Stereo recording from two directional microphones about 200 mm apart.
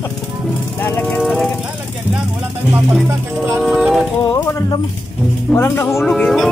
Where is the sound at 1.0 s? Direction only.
Centre (ahead or behind).